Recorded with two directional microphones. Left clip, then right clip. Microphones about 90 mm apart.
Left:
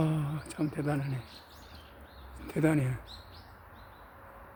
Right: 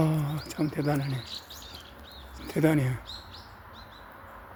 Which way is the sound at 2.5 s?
30° right (ahead or behind).